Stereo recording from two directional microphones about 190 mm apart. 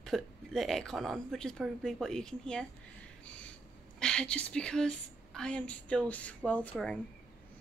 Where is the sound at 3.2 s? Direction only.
5° left (ahead or behind).